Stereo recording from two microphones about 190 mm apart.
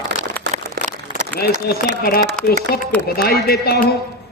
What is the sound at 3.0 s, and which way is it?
Speech, 55° left (ahead or behind).